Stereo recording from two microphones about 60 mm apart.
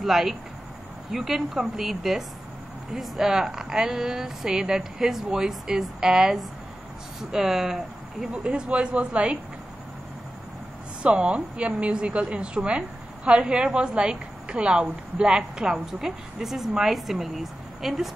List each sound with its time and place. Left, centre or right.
0.0 s a woman's voice: centre
8.3 s speech: centre
11.0 s a woman's voice: centre